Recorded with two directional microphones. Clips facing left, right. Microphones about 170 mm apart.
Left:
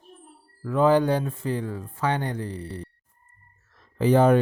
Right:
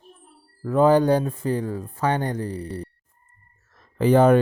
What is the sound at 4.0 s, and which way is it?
Speech, 55° right (ahead or behind).